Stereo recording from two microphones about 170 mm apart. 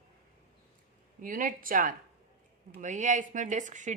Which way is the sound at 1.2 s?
55° right (ahead or behind).